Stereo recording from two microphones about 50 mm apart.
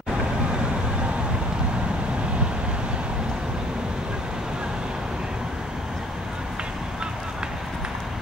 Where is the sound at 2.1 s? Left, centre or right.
Centre.